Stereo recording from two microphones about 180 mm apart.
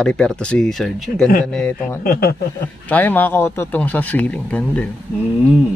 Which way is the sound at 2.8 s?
10° left (ahead or behind).